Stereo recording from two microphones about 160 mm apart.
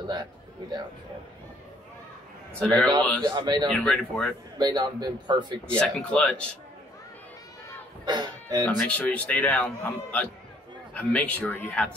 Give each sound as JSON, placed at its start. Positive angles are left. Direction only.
{"t": 0.1, "sound": "a man's voice", "side_deg": -25}
{"t": 3.0, "sound": "speech", "side_deg": 5}
{"t": 3.3, "sound": "speech", "side_deg": -30}
{"t": 3.7, "sound": "speech", "side_deg": 5}
{"t": 4.6, "sound": "speech", "side_deg": -25}
{"t": 5.8, "sound": "speech", "side_deg": 5}
{"t": 8.0, "sound": "speech", "side_deg": -25}
{"t": 8.6, "sound": "speech", "side_deg": 5}